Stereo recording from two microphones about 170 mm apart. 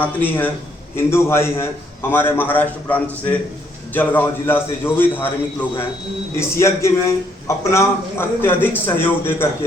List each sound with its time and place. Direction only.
0.0 s a man's voice: 10° left (ahead or behind)